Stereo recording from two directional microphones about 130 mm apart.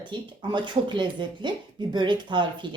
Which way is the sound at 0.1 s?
35° right (ahead or behind).